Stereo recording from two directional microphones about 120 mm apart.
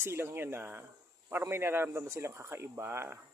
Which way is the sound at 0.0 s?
20° right (ahead or behind).